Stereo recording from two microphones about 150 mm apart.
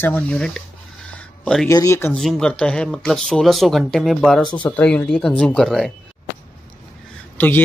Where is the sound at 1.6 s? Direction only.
20° left (ahead or behind).